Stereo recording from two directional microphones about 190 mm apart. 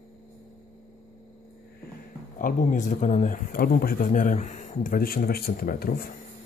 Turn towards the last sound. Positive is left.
turn(degrees=55)  # may be behind; listen again after turning